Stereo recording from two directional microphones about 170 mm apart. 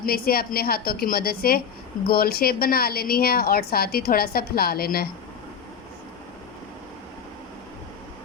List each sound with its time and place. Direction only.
0.0 s a woman's voice: 60° left (ahead or behind)